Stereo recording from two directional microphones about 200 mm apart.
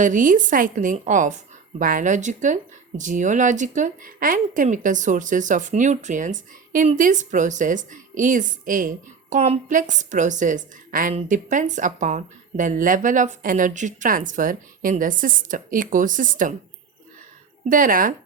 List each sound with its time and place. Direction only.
0.0 s a woman's voice: 40° right (ahead or behind)
17.7 s speech: 45° right (ahead or behind)